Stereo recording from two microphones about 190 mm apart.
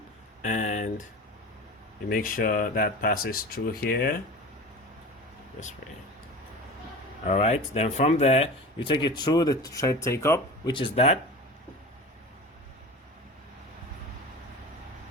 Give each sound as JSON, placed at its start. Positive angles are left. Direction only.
{"t": 0.4, "sound": "speech", "side_deg": 40}
{"t": 2.0, "sound": "speech", "side_deg": 45}
{"t": 7.3, "sound": "speech", "side_deg": 35}